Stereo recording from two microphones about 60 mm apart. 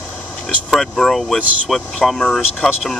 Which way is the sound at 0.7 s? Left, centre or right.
Centre.